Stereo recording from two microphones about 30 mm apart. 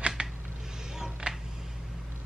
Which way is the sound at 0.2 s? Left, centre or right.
Right.